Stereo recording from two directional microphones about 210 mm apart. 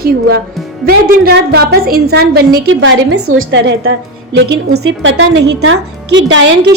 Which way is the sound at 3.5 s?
60° right (ahead or behind).